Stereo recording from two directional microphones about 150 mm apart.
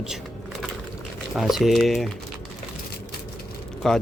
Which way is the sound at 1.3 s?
Centre (ahead or behind).